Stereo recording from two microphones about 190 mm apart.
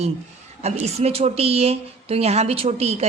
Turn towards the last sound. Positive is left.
turn(degrees=-35)  # may be behind; listen again after turning